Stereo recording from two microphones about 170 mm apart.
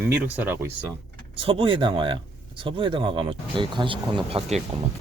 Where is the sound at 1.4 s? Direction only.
30° right (ahead or behind).